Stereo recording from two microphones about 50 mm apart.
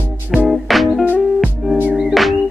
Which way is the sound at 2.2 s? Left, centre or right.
Centre.